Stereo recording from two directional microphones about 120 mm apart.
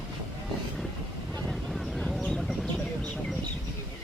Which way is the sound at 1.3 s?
Centre (ahead or behind).